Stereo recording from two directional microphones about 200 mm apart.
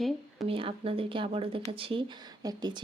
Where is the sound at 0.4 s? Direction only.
25° right (ahead or behind).